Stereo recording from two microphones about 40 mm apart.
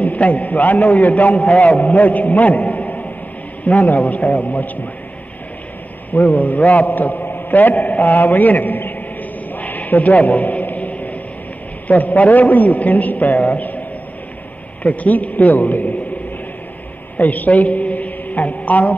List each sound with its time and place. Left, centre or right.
0.0 s a man's voice: left
6.1 s a man's voice: left
9.6 s a sound: left
11.9 s a man's voice: left
14.8 s a man's voice: left
17.2 s a man's voice: left